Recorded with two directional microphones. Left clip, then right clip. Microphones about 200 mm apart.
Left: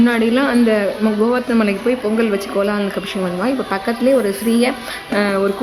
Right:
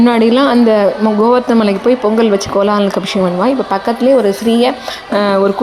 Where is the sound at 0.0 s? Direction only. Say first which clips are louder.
Right 6 dB; 20° right (ahead or behind).